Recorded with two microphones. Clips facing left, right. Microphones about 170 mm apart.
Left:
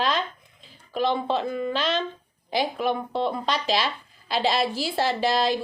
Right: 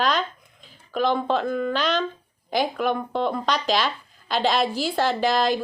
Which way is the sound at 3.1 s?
30° left (ahead or behind).